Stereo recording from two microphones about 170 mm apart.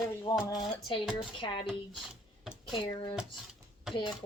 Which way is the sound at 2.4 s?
Centre (ahead or behind).